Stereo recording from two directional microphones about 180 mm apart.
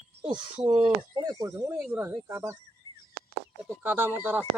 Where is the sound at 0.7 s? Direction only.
35° right (ahead or behind).